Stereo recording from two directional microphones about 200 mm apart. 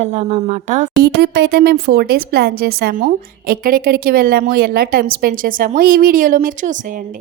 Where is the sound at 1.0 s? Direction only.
55° right (ahead or behind); by 7.2 s 40° right (ahead or behind).